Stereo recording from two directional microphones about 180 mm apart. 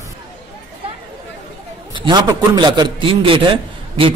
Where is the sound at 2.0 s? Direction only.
25° right (ahead or behind).